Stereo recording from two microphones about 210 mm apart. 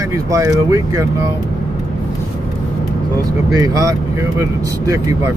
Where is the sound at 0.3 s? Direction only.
15° right (ahead or behind).